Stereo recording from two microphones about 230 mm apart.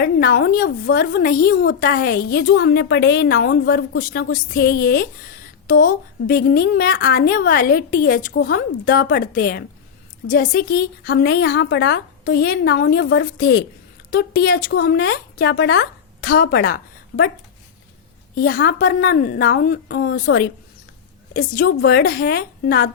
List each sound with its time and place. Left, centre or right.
0.0 s a woman's voice: left
18.3 s a woman's voice: left